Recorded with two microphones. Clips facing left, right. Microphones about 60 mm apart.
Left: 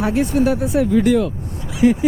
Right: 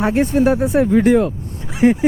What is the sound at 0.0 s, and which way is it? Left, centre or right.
Speech, right.